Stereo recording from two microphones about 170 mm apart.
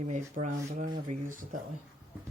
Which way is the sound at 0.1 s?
50° right (ahead or behind).